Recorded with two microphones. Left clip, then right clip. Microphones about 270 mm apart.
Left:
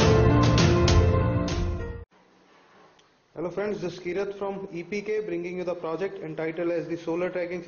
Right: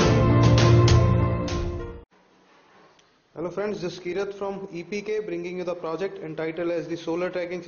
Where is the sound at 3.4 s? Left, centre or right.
Centre.